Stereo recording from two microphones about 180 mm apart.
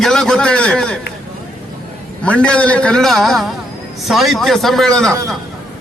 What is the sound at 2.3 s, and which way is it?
A man's voice, 5° left (ahead or behind).